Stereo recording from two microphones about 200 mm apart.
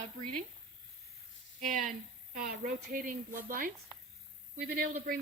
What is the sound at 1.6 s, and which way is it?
A woman's voice, 40° right (ahead or behind).